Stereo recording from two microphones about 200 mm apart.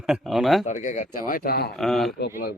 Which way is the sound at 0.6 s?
40° left (ahead or behind).